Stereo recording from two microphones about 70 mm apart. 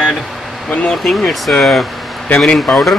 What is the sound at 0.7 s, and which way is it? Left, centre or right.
Speech, centre.